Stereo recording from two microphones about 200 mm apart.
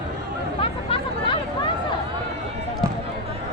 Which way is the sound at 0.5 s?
30° left (ahead or behind).